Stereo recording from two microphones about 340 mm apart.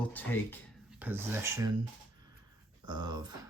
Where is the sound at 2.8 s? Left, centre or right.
Centre.